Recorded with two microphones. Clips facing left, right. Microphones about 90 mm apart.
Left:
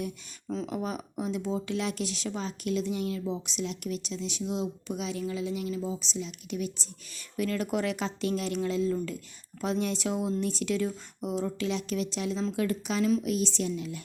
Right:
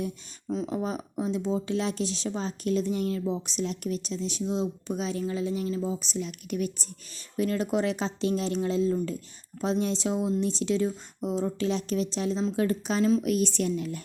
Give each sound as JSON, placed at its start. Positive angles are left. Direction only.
{"t": 0.5, "sound": "speech", "side_deg": -25}
{"t": 7.3, "sound": "speech", "side_deg": -25}
{"t": 13.2, "sound": "speech", "side_deg": -50}